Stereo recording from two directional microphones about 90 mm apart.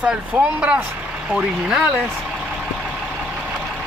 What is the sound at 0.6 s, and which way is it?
Speech, 15° right (ahead or behind).